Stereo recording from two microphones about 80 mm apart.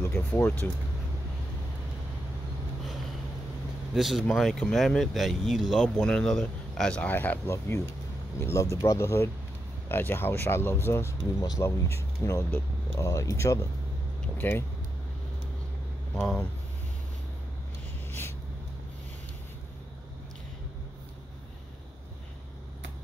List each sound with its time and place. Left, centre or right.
0.0 s speech: left
3.9 s speech: centre
5.9 s a man's voice: centre
7.0 s speech: left
12.4 s speech: left
13.0 s speech: left
14.4 s speech: left